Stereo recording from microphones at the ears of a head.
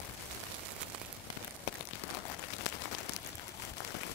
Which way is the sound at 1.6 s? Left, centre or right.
Left.